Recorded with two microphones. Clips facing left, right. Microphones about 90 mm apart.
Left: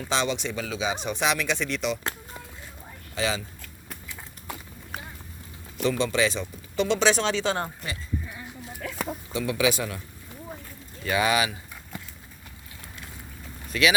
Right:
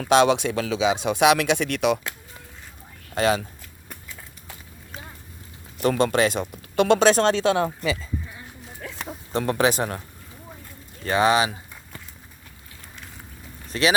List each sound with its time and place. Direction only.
0.0 s speech: 65° right (ahead or behind)
3.2 s speech: 55° right (ahead or behind)
5.8 s speech: 55° right (ahead or behind)
9.3 s speech: 45° right (ahead or behind)
11.0 s speech: 35° right (ahead or behind)
13.7 s speech: 35° right (ahead or behind)